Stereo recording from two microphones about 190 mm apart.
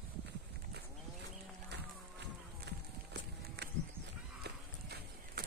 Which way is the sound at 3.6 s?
60° right (ahead or behind).